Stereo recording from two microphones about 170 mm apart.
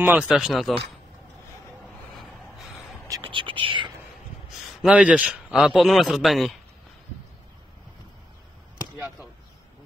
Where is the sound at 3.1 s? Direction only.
30° right (ahead or behind).